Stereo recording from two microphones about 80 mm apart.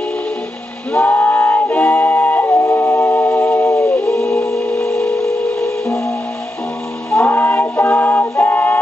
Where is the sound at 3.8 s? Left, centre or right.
Centre.